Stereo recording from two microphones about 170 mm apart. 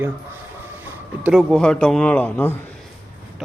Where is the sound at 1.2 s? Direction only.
5° right (ahead or behind).